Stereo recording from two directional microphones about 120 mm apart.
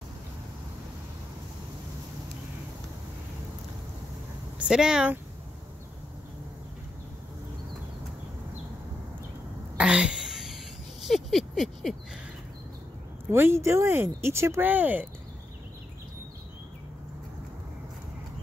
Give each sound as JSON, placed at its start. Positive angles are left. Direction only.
{"t": 4.6, "sound": "speech", "side_deg": -5}
{"t": 9.8, "sound": "a sound", "side_deg": -10}
{"t": 13.3, "sound": "speech", "side_deg": -20}